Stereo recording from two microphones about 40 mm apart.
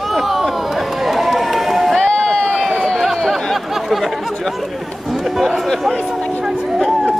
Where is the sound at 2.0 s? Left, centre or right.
Centre.